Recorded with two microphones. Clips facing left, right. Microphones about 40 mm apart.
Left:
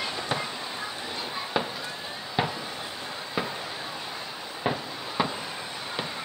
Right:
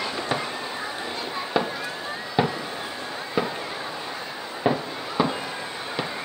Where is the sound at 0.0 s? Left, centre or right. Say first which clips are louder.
Right 3 dB; centre.